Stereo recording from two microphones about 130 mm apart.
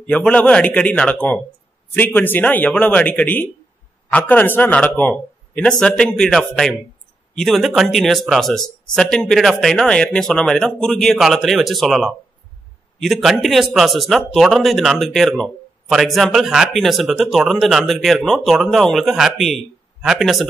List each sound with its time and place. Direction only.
0.0 s speech: 10° left (ahead or behind)